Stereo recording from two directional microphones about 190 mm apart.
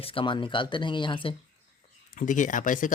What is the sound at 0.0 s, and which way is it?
Speech, 30° left (ahead or behind).